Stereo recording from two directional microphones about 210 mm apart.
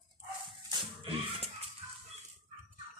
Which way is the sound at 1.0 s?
25° right (ahead or behind).